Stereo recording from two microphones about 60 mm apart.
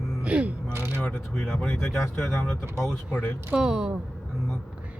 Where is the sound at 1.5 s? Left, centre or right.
Left.